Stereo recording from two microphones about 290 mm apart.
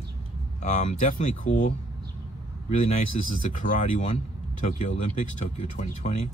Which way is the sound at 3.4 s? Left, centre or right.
Left.